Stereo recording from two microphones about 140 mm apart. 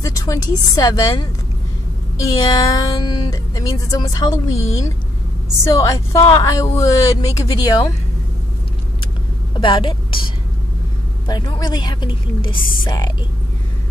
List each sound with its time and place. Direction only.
0.0 s speech: 25° left (ahead or behind)
9.0 s vehicle: 35° left (ahead or behind)
11.2 s a woman's voice: 30° left (ahead or behind)